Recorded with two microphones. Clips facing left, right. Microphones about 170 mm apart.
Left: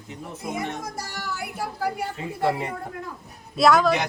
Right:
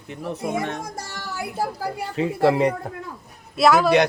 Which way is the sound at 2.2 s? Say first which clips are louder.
Right 10 dB; 90° right.